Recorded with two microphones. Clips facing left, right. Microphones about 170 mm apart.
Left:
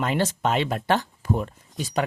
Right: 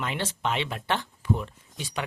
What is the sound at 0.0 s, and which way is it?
Speech, 40° left (ahead or behind).